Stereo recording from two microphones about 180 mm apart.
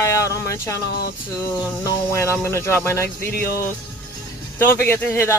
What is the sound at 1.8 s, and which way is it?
Speech, 15° left (ahead or behind).